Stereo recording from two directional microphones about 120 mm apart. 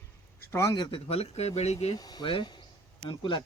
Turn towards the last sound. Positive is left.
turn(degrees=40)  # may be behind; listen again after turning